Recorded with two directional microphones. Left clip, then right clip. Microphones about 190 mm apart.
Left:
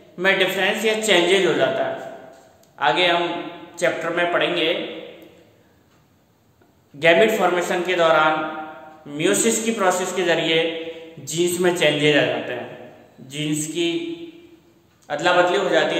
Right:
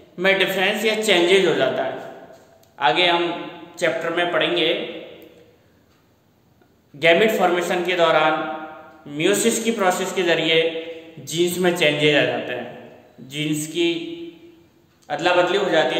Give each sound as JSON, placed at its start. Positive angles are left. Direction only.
{"t": 0.1, "sound": "a man's voice", "side_deg": -15}
{"t": 7.0, "sound": "a man's voice", "side_deg": -10}
{"t": 15.0, "sound": "a man's voice", "side_deg": -5}